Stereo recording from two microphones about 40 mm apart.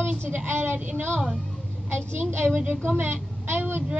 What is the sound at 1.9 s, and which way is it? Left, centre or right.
A woman's voice, right.